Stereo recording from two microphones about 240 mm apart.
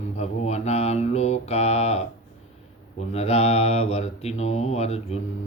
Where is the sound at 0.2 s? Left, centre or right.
Left.